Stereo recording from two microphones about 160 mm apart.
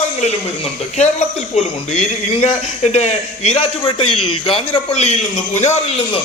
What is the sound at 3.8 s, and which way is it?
A man's voice, 30° left (ahead or behind).